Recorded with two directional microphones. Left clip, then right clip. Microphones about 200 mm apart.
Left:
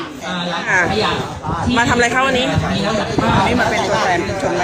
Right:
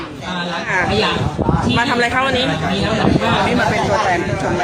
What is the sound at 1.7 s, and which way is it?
Speech, 10° left (ahead or behind).